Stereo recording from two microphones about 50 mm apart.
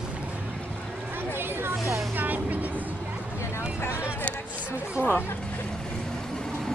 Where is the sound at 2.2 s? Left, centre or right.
Right.